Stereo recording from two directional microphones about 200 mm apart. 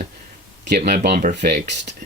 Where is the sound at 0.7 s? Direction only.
50° right (ahead or behind).